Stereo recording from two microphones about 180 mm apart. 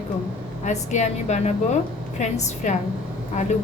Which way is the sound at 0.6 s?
40° left (ahead or behind).